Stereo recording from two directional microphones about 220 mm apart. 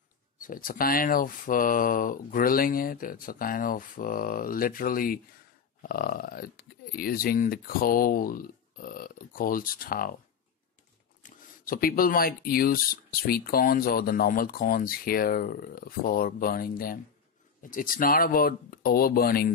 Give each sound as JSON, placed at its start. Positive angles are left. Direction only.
{"t": 0.4, "sound": "speech", "side_deg": 40}
{"t": 11.2, "sound": "speech", "side_deg": 40}